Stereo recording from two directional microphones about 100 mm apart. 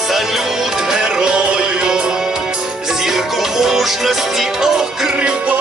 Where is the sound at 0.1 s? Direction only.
5° right (ahead or behind).